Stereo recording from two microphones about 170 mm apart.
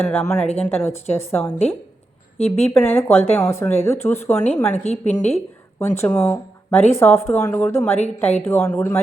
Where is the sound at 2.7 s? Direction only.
15° left (ahead or behind).